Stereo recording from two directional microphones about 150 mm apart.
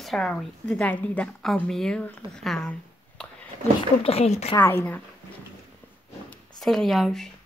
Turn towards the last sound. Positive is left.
turn(degrees=0)  # may be behind; listen again after turning